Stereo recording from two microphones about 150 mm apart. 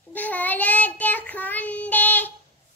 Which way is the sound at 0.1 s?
10° left (ahead or behind).